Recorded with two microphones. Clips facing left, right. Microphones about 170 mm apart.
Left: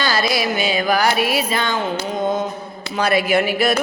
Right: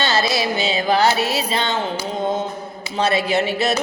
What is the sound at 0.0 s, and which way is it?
Speech, 25° right (ahead or behind).